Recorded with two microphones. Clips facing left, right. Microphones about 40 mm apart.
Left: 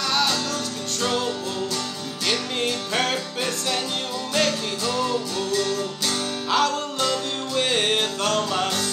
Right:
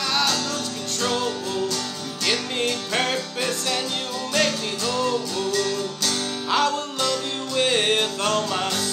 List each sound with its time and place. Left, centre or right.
2.2 s music: centre
5.5 s music: left
6.5 s music: centre